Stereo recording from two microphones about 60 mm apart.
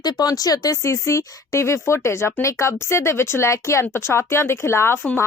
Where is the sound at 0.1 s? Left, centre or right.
Left.